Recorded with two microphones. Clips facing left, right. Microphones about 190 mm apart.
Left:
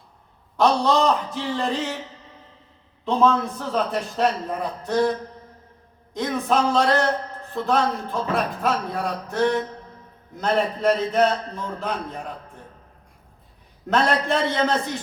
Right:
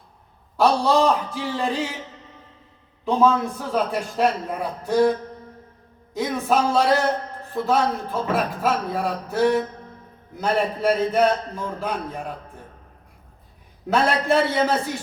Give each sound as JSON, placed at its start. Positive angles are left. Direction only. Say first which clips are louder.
{"t": 0.5, "sound": "a man's voice", "louder": "right 1 dB", "side_deg": -10}
{"t": 3.0, "sound": "a man's voice", "louder": "right 1 dB", "side_deg": -10}
{"t": 6.1, "sound": "a man's voice", "louder": "right 1 dB", "side_deg": -5}
{"t": 13.8, "sound": "a man's voice", "louder": "right 1 dB", "side_deg": -5}